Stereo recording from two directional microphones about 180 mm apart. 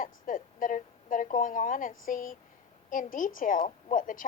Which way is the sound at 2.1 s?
50° left (ahead or behind).